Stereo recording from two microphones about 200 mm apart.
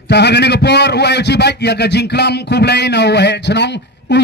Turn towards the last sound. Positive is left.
turn(degrees=60)  # may be behind; listen again after turning